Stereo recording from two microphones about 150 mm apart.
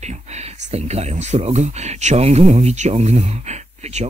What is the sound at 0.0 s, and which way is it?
Speech, 50° right (ahead or behind).